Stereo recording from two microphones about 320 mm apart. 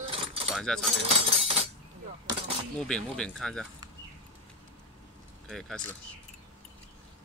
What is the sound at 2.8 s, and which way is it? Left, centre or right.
Speech, centre.